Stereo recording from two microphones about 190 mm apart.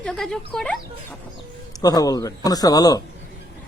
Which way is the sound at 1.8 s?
20° left (ahead or behind).